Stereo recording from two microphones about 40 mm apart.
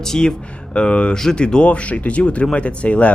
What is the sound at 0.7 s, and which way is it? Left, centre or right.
Speech, left.